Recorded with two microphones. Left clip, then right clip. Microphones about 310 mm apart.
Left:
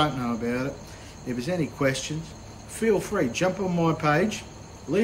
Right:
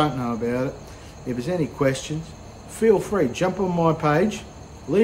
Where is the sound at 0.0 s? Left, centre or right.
Centre.